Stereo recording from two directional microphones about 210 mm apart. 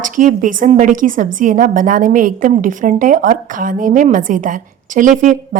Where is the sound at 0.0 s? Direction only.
40° right (ahead or behind).